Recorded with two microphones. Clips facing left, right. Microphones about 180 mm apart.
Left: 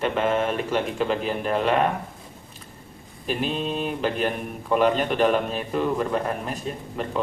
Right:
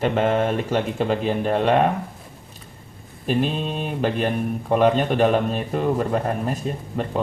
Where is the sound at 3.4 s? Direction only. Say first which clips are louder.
Left 1 dB; 45° right (ahead or behind).